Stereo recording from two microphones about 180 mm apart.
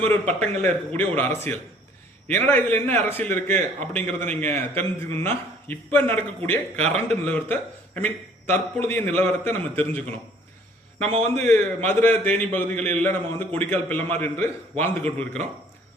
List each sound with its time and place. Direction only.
0.0 s a man's voice: 10° left (ahead or behind)
6.7 s a man's voice: 35° right (ahead or behind)
7.1 s a man's voice: 10° left (ahead or behind)
11.3 s a man's voice: 5° left (ahead or behind)